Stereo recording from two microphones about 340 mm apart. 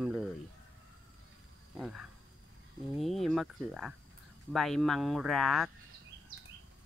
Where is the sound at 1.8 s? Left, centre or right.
Centre.